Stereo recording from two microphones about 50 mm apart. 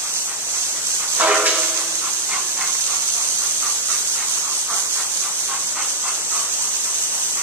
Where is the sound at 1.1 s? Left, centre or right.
Right.